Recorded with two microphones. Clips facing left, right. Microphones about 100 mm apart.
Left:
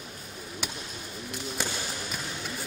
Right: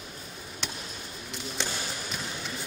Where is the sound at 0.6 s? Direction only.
10° left (ahead or behind).